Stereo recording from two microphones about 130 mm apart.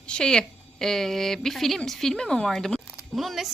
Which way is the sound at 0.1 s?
5° left (ahead or behind).